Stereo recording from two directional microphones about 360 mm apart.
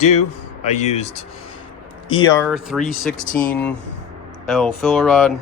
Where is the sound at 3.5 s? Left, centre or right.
Centre.